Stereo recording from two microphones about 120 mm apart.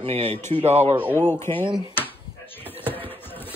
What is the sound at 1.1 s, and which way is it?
Speech, 20° left (ahead or behind).